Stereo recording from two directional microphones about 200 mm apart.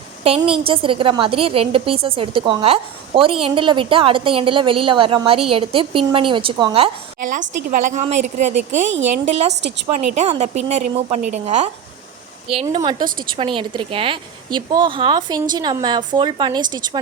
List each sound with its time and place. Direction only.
0.3 s a woman's voice: 25° right (ahead or behind)
7.2 s a woman's voice: 40° right (ahead or behind)
9.5 s a woman's voice: 60° right (ahead or behind)
10.2 s a woman's voice: 30° right (ahead or behind)
12.7 s a woman's voice: 25° right (ahead or behind)